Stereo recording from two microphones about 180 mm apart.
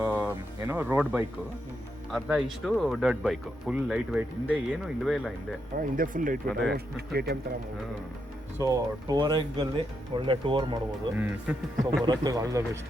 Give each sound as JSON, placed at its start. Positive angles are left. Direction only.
{"t": 0.0, "sound": "a sound", "side_deg": -10}
{"t": 0.7, "sound": "speech", "side_deg": -10}
{"t": 5.7, "sound": "speech", "side_deg": -50}
{"t": 6.5, "sound": "speech", "side_deg": 0}
{"t": 6.7, "sound": "speech", "side_deg": -60}
{"t": 8.5, "sound": "speech", "side_deg": -20}
{"t": 11.2, "sound": "speech", "side_deg": -10}
{"t": 12.0, "sound": "speech", "side_deg": -20}